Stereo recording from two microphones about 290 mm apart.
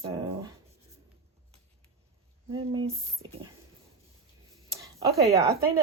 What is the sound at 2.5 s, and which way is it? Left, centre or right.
Speech, centre.